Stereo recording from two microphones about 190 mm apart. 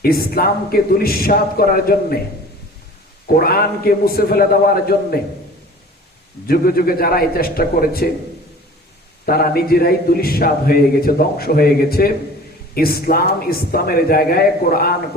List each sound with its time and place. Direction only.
0.0 s a man's voice: 50° left (ahead or behind)
3.2 s a man's voice: 50° left (ahead or behind)
6.5 s a man's voice: 50° left (ahead or behind)
9.2 s a man's voice: 50° left (ahead or behind)